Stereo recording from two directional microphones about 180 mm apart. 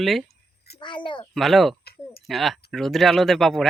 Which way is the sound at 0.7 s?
25° left (ahead or behind).